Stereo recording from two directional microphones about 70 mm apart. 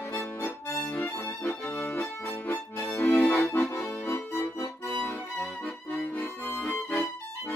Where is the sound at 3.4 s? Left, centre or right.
Left.